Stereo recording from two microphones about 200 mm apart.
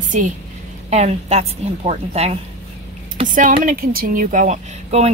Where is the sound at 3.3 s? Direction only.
40° right (ahead or behind).